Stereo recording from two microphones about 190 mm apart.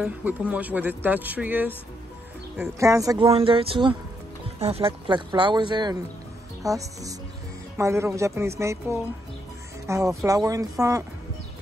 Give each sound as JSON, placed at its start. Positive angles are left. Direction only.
{"t": 0.0, "sound": "speech", "side_deg": -10}
{"t": 2.8, "sound": "speech", "side_deg": -15}
{"t": 3.3, "sound": "speech", "side_deg": -30}